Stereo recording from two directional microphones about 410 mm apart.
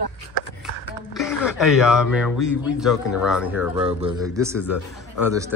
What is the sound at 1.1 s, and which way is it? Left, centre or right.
Speech, centre.